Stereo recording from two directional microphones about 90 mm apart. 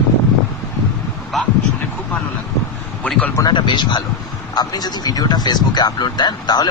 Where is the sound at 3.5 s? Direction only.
55° left (ahead or behind).